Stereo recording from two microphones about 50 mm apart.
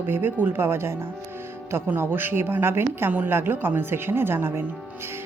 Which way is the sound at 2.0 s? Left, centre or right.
Right.